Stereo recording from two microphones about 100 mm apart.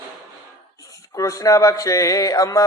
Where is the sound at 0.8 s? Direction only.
35° left (ahead or behind).